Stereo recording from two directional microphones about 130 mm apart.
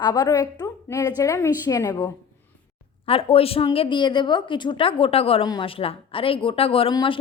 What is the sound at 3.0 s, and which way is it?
A woman's voice, 45° left (ahead or behind).